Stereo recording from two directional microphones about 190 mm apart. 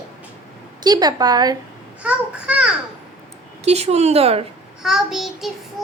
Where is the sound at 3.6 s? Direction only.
35° right (ahead or behind).